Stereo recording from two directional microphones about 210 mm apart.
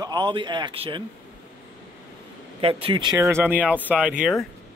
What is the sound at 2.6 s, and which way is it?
Speech, 25° right (ahead or behind).